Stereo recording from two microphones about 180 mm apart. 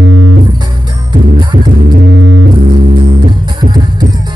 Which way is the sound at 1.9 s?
65° right (ahead or behind).